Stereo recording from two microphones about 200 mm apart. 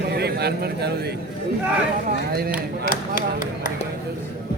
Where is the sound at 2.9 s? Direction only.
45° left (ahead or behind).